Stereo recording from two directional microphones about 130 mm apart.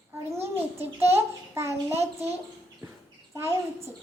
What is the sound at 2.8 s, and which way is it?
Bird, 15° right (ahead or behind).